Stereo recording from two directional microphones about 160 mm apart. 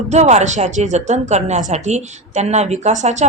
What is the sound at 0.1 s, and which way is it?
Speech, 45° right (ahead or behind).